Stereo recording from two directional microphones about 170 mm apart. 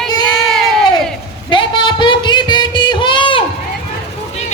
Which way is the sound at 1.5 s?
30° left (ahead or behind).